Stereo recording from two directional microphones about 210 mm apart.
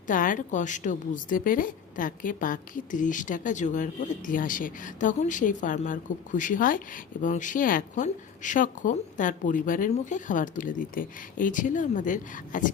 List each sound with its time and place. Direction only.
0.1 s a woman's voice: 40° left (ahead or behind)